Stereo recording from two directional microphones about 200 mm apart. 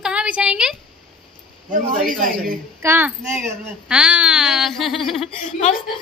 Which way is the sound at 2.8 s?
10° right (ahead or behind).